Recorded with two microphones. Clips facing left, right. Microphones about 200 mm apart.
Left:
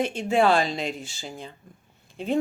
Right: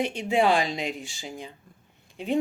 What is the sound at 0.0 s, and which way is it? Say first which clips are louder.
Speech: left 2 dB; 15° right (ahead or behind).